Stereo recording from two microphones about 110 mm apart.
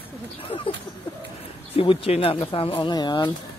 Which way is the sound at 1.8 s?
55° left (ahead or behind).